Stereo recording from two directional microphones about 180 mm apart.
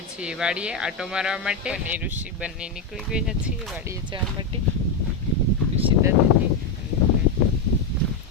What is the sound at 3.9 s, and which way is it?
Speech, 25° right (ahead or behind).